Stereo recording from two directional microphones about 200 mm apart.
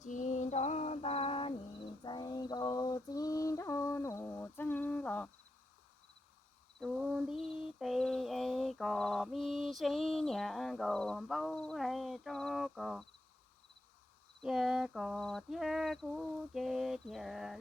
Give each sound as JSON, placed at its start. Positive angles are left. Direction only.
{"t": 0.0, "sound": "female singing", "side_deg": 40}
{"t": 2.0, "sound": "mantra", "side_deg": 20}
{"t": 6.7, "sound": "mantra", "side_deg": 0}
{"t": 14.4, "sound": "a sound", "side_deg": 0}